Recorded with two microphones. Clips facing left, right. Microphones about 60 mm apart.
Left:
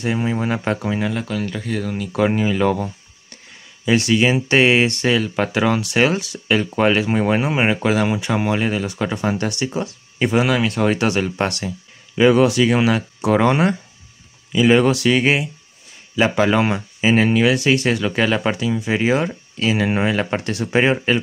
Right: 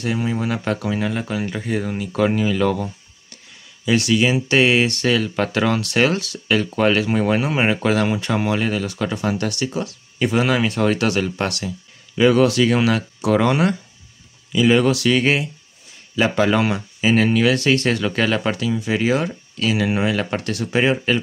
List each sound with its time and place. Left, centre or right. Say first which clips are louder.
0.0 s speech: left 1 dB; left
1.1 s speech: even; centre
2.3 s speech: left 1 dB; left
10.4 s speech: even; centre
10.8 s speech: left 1 dB; left
12.2 s speech: left 1 dB; centre